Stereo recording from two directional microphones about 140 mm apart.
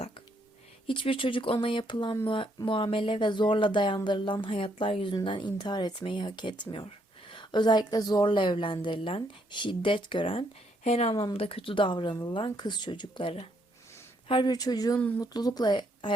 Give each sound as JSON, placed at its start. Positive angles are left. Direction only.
{"t": 0.9, "sound": "speech", "side_deg": 40}
{"t": 10.8, "sound": "speech", "side_deg": 50}
{"t": 14.9, "sound": "speech", "side_deg": 10}
{"t": 15.2, "sound": "speech", "side_deg": 30}